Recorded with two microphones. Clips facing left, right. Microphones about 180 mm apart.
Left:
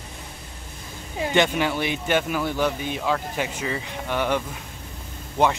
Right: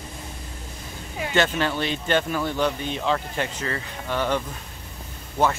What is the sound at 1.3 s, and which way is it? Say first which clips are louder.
Speech: left 1 dB; 15° left (ahead or behind).